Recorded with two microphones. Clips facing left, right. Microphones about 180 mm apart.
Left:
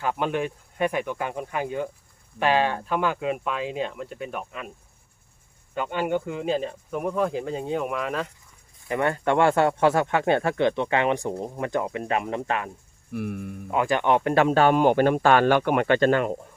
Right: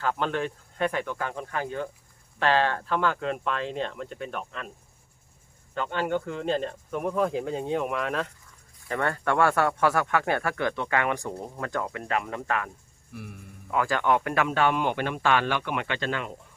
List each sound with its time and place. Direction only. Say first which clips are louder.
0.0 s speech: left 2 dB; 15° left (ahead or behind)
5.7 s speech: left 2 dB; 10° left (ahead or behind)
8.9 s speech: left 4 dB; 15° left (ahead or behind)
13.1 s speech: left 11 dB; 60° left (ahead or behind)
13.7 s speech: left 2 dB; 20° left (ahead or behind); by 16.3 s 50° left (ahead or behind)